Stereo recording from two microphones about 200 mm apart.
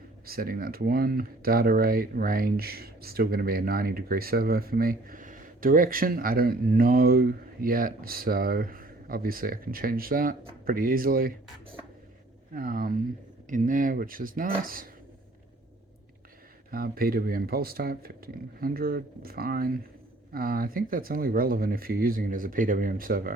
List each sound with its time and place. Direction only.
0.3 s speech: 50° right (ahead or behind)
12.5 s speech: 45° right (ahead or behind)
16.7 s speech: 50° right (ahead or behind)